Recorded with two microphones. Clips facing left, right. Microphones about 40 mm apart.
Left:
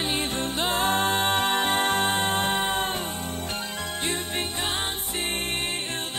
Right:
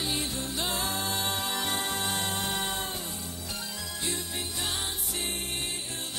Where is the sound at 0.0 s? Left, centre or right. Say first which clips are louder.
Left 5 dB; left.